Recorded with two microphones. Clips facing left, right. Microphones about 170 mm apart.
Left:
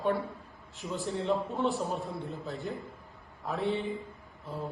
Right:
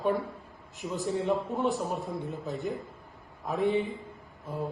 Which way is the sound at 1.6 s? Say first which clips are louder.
Right 1 dB; 15° right (ahead or behind).